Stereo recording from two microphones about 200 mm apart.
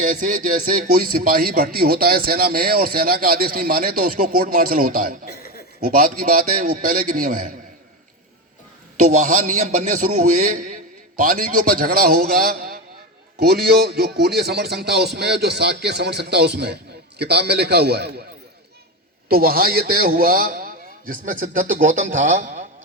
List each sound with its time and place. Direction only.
0.0 s speech: 40° right (ahead or behind)
5.2 s chuckle: 50° left (ahead or behind)
5.9 s speech: 45° right (ahead or behind)
9.0 s a man's voice: 40° right (ahead or behind)
19.3 s speech: 50° right (ahead or behind)